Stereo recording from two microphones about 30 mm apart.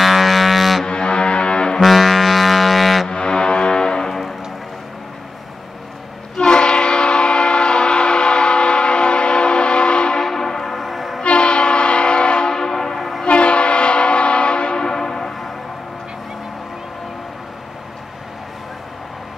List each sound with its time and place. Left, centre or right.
0.0 s music: centre
0.8 s music: left
1.8 s music: centre
3.1 s music: left
6.3 s train: left
10.2 s train: centre
11.2 s train: left
12.4 s train: centre
13.3 s train horn: left
14.9 s train horn: centre